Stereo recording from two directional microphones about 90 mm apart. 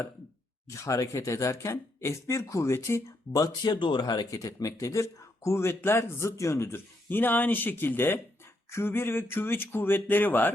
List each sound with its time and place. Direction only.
0.7 s speech: 35° left (ahead or behind); by 10.5 s 20° left (ahead or behind)